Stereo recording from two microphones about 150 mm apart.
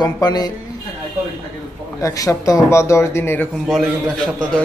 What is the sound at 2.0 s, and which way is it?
Speech, 20° left (ahead or behind).